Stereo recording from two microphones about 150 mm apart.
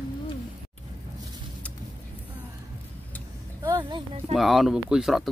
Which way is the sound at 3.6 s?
25° right (ahead or behind).